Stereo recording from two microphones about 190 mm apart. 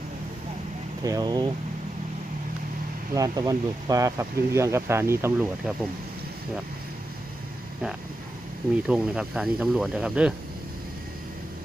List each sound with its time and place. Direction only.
1.0 s speech: 20° right (ahead or behind)
3.2 s speech: 20° right (ahead or behind)
8.9 s speech: 5° right (ahead or behind)